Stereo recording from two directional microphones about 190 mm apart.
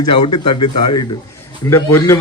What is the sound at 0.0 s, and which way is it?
Speech, 25° left (ahead or behind).